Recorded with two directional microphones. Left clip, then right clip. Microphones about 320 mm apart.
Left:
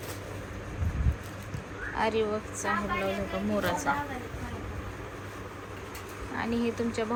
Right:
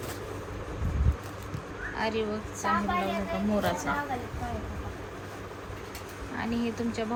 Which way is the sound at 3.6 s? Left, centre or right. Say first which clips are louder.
Left 1 dB; centre.